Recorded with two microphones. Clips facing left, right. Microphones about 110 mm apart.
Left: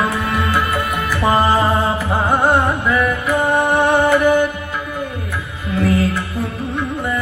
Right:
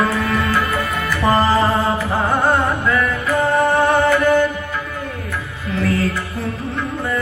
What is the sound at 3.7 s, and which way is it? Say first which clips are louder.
Music: left 1 dB; 15° left (ahead or behind).